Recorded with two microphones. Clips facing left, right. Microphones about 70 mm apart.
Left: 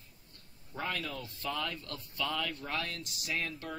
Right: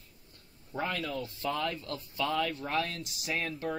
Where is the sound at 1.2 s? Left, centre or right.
Centre.